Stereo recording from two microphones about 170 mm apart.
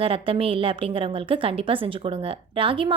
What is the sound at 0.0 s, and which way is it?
A woman's voice, 35° right (ahead or behind).